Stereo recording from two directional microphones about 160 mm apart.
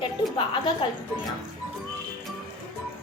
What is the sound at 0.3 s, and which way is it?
Speech, 30° left (ahead or behind).